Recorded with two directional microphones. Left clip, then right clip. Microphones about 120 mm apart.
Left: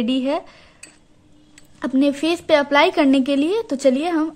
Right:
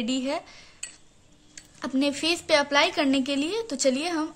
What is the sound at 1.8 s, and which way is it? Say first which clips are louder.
A woman's voice: left 6 dB; 40° left (ahead or behind).